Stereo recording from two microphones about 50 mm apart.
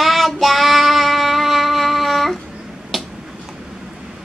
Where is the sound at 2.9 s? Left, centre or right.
Centre.